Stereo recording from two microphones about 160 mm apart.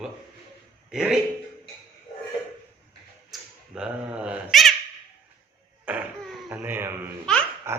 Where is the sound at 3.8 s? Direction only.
5° right (ahead or behind).